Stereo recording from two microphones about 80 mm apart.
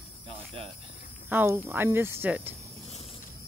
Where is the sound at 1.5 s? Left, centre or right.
Right.